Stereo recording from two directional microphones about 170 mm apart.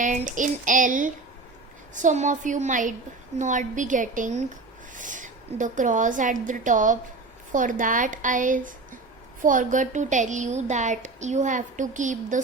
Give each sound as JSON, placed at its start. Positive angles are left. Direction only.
{"t": 0.0, "sound": "a woman's voice", "side_deg": -45}